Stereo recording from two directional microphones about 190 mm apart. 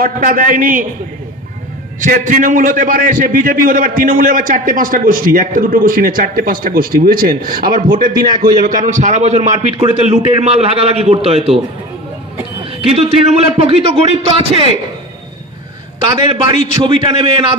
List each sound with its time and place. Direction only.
0.0 s a man's voice: 50° right (ahead or behind)
2.0 s a man's voice: 45° right (ahead or behind)
12.9 s a man's voice: 35° right (ahead or behind)
16.4 s a man's voice: 25° right (ahead or behind)